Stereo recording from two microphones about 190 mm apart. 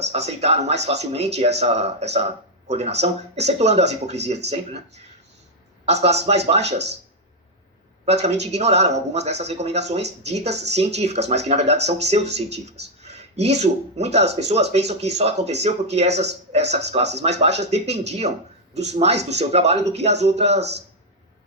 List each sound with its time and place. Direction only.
0.1 s speech: 35° right (ahead or behind)
5.8 s speech: 35° right (ahead or behind)
8.0 s speech: 35° right (ahead or behind)